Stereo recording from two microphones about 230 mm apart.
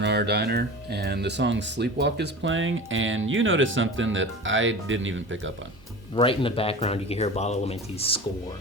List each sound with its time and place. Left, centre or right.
0.0 s speech: right
6.1 s speech: left